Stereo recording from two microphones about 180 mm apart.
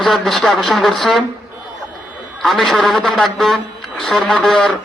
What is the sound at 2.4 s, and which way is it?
A man's voice, centre (ahead or behind).